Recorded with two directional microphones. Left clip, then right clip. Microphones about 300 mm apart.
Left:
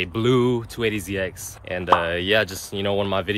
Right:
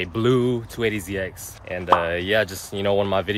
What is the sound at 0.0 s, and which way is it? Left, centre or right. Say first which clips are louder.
Speech: even; centre.